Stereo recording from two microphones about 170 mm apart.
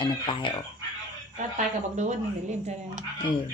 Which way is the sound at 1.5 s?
45° right (ahead or behind).